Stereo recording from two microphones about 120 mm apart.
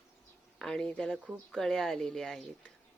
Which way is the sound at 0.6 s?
5° left (ahead or behind).